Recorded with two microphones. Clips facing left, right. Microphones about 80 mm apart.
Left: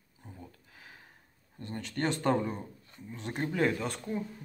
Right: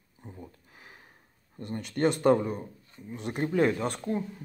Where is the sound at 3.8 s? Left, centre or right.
Right.